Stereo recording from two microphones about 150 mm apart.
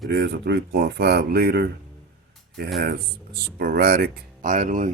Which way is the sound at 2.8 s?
90° right.